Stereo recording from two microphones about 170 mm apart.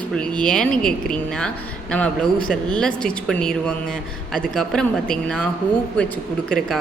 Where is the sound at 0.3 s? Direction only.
5° left (ahead or behind).